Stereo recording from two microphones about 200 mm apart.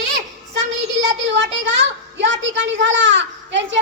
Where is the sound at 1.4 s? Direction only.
65° right (ahead or behind).